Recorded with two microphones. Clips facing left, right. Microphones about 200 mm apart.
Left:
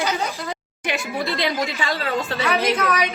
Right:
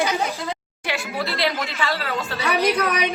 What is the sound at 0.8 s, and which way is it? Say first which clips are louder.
Speech: left 2 dB; 20° left (ahead or behind).